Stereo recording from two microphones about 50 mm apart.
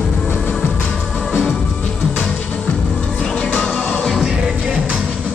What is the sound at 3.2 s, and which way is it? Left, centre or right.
Music, left.